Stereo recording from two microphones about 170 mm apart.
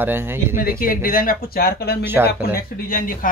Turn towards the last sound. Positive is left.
turn(degrees=60)  # may be behind; listen again after turning